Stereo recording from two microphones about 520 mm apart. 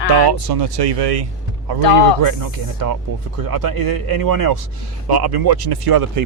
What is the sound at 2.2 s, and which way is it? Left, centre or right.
Speech, right.